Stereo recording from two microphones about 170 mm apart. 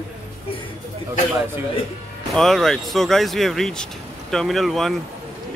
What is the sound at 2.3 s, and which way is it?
Speech, centre (ahead or behind).